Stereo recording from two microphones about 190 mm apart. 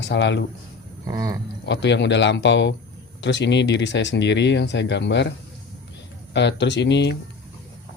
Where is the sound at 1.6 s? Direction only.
65° left (ahead or behind).